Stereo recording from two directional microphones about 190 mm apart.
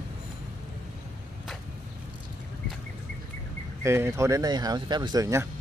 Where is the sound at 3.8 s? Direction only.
15° right (ahead or behind).